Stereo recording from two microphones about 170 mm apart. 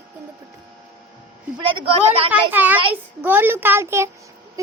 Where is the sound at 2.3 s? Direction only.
10° right (ahead or behind).